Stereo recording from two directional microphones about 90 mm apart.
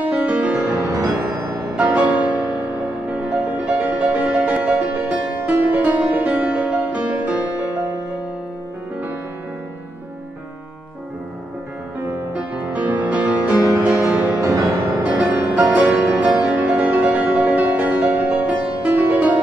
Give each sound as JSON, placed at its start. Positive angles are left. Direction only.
{"t": 0.1, "sound": "music", "side_deg": -15}
{"t": 0.8, "sound": "music", "side_deg": -40}
{"t": 1.8, "sound": "music", "side_deg": -15}
{"t": 12.4, "sound": "music", "side_deg": -15}
{"t": 14.4, "sound": "music", "side_deg": -35}
{"t": 15.0, "sound": "music", "side_deg": -15}